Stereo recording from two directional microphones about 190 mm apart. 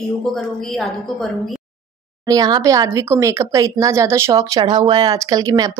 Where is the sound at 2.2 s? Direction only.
20° right (ahead or behind).